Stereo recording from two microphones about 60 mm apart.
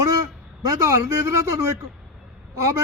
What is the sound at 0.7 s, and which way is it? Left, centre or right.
Speech, right.